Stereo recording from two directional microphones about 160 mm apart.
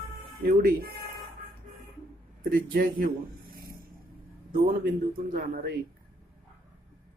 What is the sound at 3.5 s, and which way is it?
Vehicle, 70° right (ahead or behind).